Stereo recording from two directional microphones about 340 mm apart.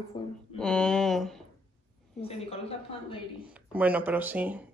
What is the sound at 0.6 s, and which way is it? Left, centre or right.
Speech, centre.